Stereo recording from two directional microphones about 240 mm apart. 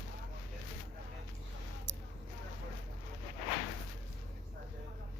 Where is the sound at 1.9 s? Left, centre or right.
Right.